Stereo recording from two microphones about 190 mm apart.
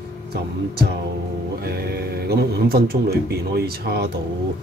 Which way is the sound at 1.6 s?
55° right (ahead or behind).